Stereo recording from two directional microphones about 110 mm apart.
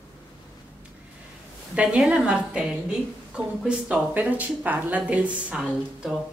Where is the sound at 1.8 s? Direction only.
10° right (ahead or behind).